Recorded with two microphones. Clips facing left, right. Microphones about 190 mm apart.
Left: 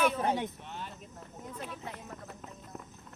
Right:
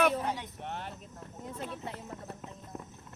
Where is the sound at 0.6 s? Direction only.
65° right (ahead or behind).